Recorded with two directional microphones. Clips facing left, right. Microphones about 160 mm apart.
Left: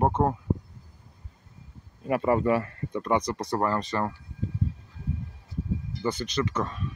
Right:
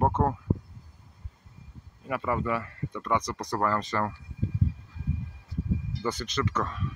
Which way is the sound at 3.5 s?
25° left (ahead or behind).